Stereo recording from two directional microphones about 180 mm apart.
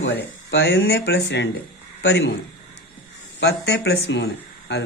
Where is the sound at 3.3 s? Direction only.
70° left (ahead or behind).